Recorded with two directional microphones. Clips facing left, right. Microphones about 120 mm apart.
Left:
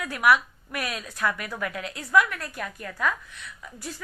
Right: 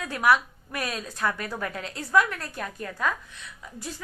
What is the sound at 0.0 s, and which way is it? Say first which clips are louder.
A woman's voice: left 1 dB; 30° right (ahead or behind).